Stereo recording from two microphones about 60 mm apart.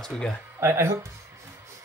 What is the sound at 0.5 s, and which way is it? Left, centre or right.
Speech, right.